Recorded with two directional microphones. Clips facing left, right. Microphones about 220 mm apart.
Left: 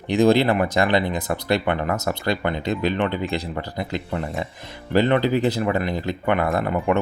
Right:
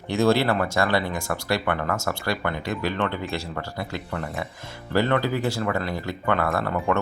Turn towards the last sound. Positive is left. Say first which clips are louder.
# left 3 dB
turn(degrees=15)  # may be behind; listen again after turning